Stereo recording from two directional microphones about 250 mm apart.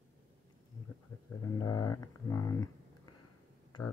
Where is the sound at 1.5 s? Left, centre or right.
Centre.